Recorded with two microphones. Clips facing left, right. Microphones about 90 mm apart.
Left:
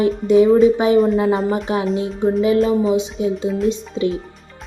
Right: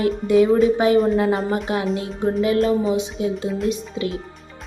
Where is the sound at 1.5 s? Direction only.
25° left (ahead or behind).